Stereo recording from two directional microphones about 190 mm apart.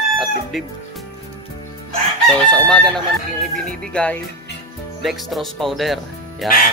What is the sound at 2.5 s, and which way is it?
Speech, 5° left (ahead or behind).